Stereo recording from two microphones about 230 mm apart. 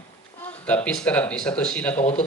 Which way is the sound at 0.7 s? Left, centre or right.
Centre.